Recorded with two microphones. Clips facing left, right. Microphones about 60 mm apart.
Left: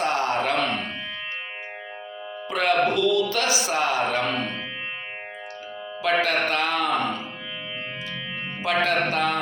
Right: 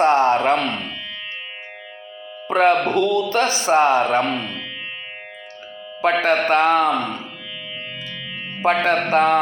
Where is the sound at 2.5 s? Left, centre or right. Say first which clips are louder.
Right 5 dB; right.